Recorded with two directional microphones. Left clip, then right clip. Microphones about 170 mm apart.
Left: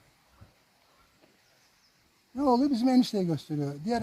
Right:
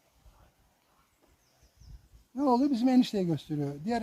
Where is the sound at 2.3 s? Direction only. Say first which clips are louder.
Left 1 dB; 30° left (ahead or behind).